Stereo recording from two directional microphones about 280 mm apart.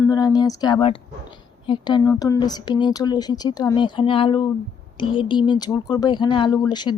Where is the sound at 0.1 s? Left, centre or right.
Centre.